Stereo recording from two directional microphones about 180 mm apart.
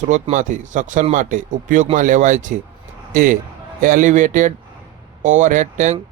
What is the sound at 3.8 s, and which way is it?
Speech, 45° right (ahead or behind).